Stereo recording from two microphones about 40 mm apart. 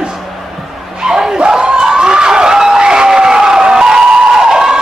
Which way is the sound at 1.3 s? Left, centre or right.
Right.